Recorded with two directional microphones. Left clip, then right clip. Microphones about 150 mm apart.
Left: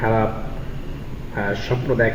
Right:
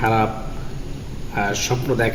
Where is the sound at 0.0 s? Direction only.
25° right (ahead or behind).